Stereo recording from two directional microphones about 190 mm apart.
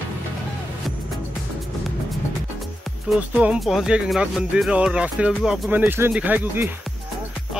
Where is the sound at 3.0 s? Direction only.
5° right (ahead or behind).